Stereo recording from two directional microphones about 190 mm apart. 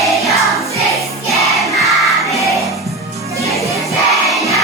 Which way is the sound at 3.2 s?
15° right (ahead or behind).